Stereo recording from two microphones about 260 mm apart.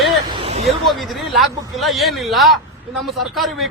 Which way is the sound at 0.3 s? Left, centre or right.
Right.